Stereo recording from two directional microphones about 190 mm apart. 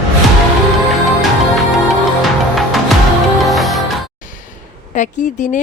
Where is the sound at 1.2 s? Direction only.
Centre (ahead or behind).